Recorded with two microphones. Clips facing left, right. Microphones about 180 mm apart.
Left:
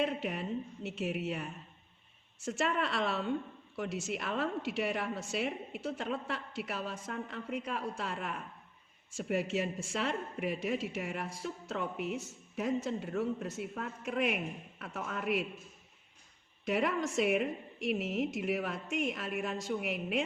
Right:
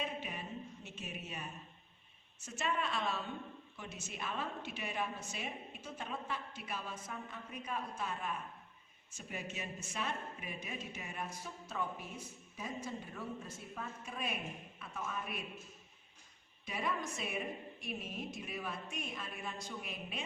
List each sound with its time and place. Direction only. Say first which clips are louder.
0.0 s a woman's voice: left 9 dB; 75° left (ahead or behind); by 11.3 s 90° left
11.4 s a woman's voice: left 6 dB; 80° left
16.6 s a woman's voice: left 8 dB; 75° left (ahead or behind)